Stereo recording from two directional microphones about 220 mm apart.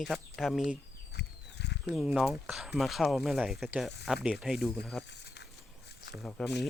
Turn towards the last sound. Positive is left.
turn(degrees=5)  # may be behind; listen again after turning